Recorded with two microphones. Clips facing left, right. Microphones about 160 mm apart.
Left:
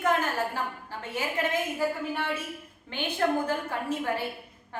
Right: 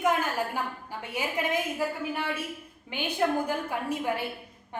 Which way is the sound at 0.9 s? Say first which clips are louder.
Even; 10° right (ahead or behind).